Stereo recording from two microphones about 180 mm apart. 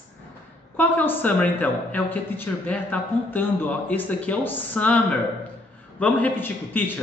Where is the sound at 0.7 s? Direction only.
10° left (ahead or behind).